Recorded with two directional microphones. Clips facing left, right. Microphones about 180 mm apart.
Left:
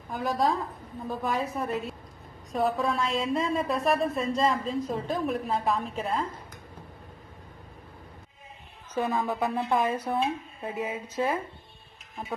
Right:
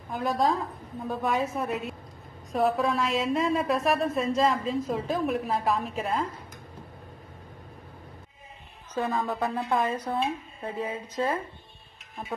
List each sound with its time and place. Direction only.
0.1 s a woman's voice: centre (ahead or behind)
9.1 s a woman's voice: centre (ahead or behind)